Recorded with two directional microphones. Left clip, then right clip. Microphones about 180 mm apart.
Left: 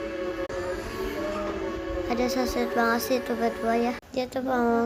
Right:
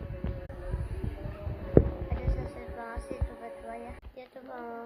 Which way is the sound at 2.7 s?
20° left (ahead or behind).